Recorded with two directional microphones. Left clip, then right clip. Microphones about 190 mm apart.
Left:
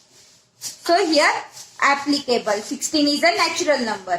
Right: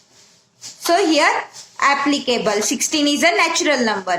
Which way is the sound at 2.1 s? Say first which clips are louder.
Right 2 dB; 30° right (ahead or behind).